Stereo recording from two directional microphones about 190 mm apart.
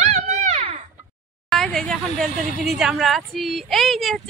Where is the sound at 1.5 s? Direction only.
Centre (ahead or behind).